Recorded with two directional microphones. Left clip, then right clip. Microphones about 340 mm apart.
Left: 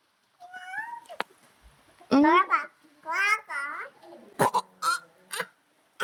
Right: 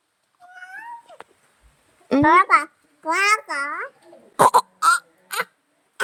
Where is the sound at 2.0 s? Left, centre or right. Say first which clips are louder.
Right 6 dB; centre.